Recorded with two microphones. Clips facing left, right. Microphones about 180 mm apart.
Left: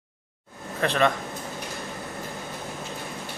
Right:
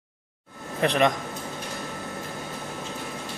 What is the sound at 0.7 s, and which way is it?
Speech, 15° right (ahead or behind).